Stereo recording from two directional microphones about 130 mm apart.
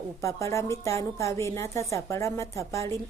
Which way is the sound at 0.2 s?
25° left (ahead or behind).